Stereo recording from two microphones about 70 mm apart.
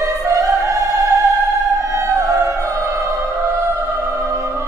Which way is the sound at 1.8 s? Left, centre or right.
Right.